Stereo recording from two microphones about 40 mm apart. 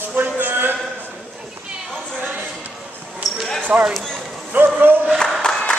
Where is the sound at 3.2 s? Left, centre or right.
Centre.